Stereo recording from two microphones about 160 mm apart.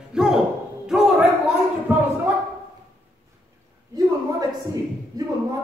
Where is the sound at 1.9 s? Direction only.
10° right (ahead or behind).